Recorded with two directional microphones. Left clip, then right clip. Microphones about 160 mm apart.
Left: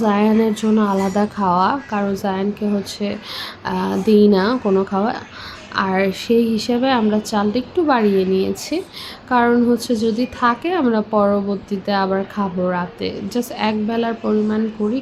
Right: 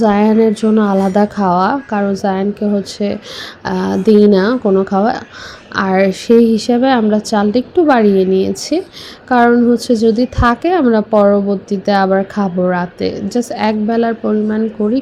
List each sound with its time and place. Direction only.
0.0 s a woman's voice: 30° right (ahead or behind)